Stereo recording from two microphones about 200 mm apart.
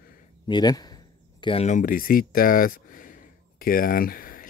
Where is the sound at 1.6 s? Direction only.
40° left (ahead or behind).